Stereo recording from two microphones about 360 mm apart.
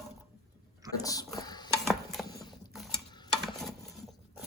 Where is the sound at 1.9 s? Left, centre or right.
Centre.